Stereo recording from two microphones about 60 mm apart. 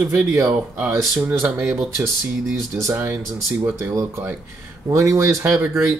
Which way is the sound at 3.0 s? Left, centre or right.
Right.